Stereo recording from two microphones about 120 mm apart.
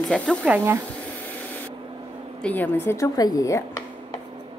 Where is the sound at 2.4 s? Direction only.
15° left (ahead or behind).